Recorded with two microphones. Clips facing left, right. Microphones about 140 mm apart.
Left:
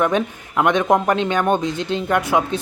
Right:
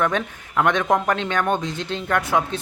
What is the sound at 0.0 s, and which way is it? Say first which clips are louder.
Speech: left 4 dB; 15° left (ahead or behind).